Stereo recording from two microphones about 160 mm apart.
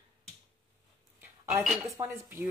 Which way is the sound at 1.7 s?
20° right (ahead or behind).